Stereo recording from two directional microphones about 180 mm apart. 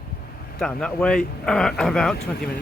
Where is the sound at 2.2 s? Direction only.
60° left (ahead or behind).